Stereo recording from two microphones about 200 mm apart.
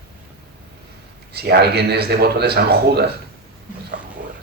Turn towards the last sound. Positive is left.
turn(degrees=-55)  # may be behind; listen again after turning